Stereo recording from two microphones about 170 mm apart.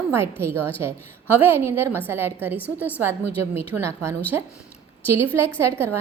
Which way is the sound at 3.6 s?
15° right (ahead or behind).